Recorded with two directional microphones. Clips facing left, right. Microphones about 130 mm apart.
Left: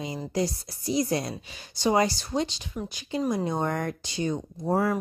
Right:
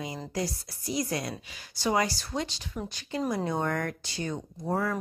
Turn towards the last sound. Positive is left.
turn(degrees=20)  # may be behind; listen again after turning